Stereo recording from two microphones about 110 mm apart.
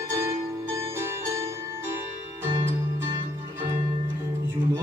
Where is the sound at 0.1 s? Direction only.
25° right (ahead or behind).